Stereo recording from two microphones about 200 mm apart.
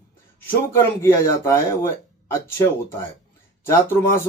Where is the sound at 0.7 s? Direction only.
15° left (ahead or behind).